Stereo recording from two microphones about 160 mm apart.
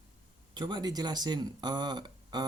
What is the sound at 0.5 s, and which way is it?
Speech, 30° right (ahead or behind).